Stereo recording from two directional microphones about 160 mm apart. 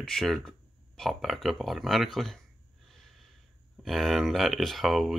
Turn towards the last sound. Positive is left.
turn(degrees=0)  # may be behind; listen again after turning